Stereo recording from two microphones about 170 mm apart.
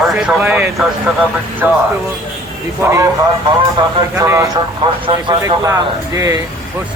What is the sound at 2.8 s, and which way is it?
Speech, 15° right (ahead or behind).